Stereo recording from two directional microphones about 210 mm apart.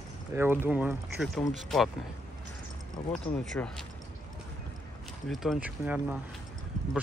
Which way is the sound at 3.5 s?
Centre (ahead or behind).